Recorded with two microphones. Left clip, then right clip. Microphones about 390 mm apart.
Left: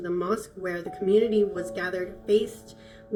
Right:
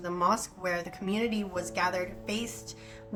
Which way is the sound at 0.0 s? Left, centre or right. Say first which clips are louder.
Even; right.